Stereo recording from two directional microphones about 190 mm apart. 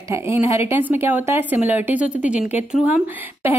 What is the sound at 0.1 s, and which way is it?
Speech, 15° right (ahead or behind).